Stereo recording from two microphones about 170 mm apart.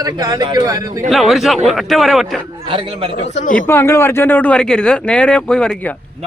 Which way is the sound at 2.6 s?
30° right (ahead or behind).